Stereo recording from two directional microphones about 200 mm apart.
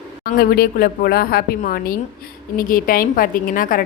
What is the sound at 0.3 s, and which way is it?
A woman's voice, 50° left (ahead or behind).